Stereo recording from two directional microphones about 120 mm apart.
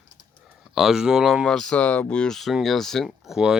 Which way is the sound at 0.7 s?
5° right (ahead or behind).